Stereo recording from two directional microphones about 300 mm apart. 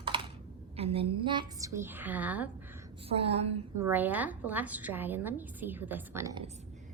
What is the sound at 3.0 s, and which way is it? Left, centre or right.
Speech, centre.